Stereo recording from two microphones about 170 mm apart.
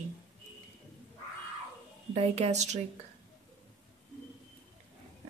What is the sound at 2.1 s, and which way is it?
Speech, 40° right (ahead or behind).